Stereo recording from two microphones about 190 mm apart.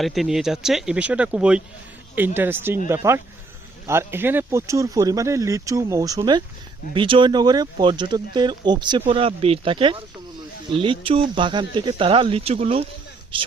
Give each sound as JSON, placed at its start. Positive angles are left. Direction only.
{"t": 0.0, "sound": "speech", "side_deg": 0}